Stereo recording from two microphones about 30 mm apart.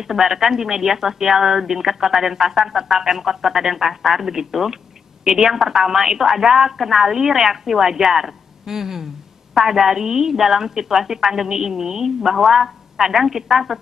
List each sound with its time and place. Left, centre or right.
0.1 s a woman's voice: centre